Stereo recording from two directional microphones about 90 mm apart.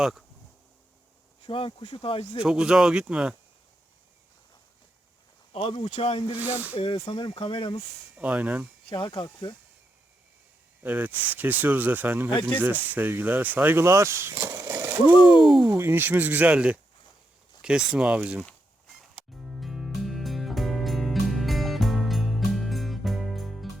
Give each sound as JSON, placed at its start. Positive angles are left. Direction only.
{"t": 0.0, "sound": "speech", "side_deg": -5}
{"t": 1.5, "sound": "speech", "side_deg": 85}
{"t": 2.4, "sound": "speech", "side_deg": -10}
{"t": 5.5, "sound": "speech", "side_deg": 90}
{"t": 6.4, "sound": "speech", "side_deg": -20}
{"t": 7.1, "sound": "speech", "side_deg": 75}
{"t": 8.1, "sound": "speech", "side_deg": -15}
{"t": 8.9, "sound": "speech", "side_deg": 60}
{"t": 10.8, "sound": "speech", "side_deg": -20}
{"t": 14.8, "sound": "a sound", "side_deg": -20}
{"t": 15.2, "sound": "speech", "side_deg": 65}
{"t": 15.6, "sound": "speech", "side_deg": -30}
{"t": 18.4, "sound": "music", "side_deg": 0}